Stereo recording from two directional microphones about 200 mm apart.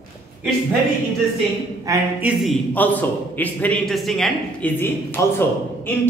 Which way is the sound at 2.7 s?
10° left (ahead or behind).